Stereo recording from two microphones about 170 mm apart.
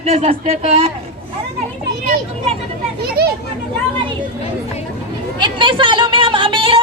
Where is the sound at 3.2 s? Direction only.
65° right (ahead or behind).